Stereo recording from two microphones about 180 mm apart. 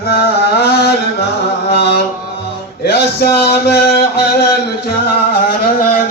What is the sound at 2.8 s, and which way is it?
Mantra, 65° left (ahead or behind).